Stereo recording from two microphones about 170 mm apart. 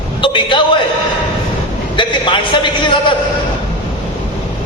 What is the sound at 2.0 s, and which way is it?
A man's voice, 30° left (ahead or behind).